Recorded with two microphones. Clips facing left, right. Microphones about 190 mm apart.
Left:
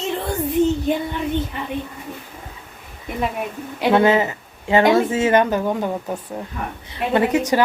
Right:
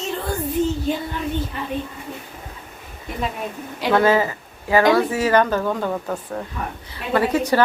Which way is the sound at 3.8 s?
20° left (ahead or behind).